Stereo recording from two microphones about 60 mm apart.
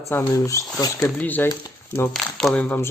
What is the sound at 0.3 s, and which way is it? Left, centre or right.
Speech, left.